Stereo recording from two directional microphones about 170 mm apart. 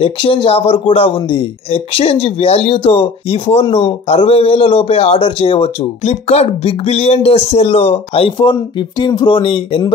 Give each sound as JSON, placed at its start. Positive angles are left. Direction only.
{"t": 0.0, "sound": "speech", "side_deg": 30}